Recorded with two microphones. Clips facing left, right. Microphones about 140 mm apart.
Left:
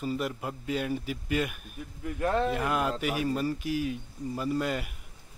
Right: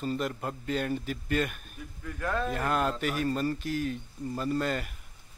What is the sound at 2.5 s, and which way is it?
A man's voice, 10° left (ahead or behind).